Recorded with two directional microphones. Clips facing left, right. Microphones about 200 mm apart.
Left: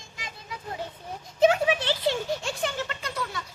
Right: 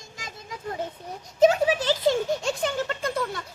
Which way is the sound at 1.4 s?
40° right (ahead or behind).